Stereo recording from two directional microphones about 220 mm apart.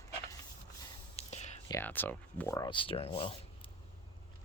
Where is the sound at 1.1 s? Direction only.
30° left (ahead or behind).